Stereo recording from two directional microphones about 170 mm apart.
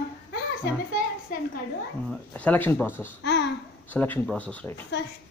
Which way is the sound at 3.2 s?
90° left.